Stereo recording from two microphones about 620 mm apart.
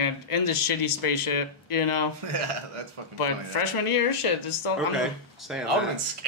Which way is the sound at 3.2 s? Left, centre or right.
Left.